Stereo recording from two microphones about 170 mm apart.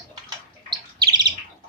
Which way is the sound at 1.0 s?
25° right (ahead or behind).